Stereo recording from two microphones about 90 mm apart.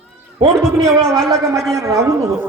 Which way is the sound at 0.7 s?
35° right (ahead or behind).